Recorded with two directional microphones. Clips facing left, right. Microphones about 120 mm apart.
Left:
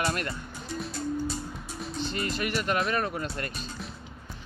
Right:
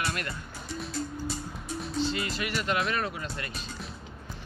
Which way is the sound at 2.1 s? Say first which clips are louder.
Left 1 dB; 45° left (ahead or behind).